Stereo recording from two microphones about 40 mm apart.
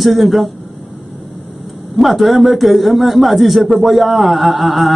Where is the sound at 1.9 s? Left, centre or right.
Centre.